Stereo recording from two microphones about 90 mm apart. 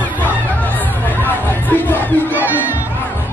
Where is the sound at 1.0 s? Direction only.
20° left (ahead or behind).